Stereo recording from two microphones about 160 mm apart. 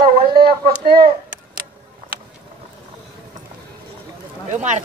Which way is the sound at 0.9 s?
70° right (ahead or behind).